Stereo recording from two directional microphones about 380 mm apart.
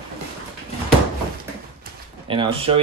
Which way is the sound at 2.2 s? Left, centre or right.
Centre.